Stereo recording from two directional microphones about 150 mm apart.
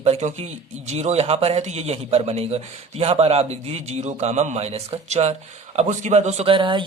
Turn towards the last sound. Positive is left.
turn(degrees=-35)  # may be behind; listen again after turning